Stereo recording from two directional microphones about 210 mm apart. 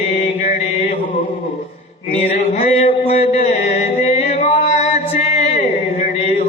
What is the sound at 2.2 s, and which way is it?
Music, 30° left (ahead or behind).